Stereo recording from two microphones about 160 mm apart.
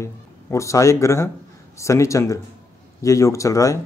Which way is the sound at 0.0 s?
20° left (ahead or behind).